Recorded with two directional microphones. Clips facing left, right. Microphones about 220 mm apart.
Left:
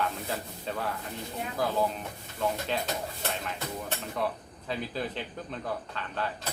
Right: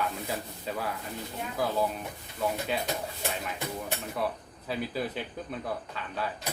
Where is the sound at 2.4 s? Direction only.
10° right (ahead or behind).